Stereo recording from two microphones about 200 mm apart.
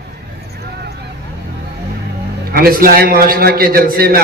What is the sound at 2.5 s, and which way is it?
A man's voice, 50° right (ahead or behind).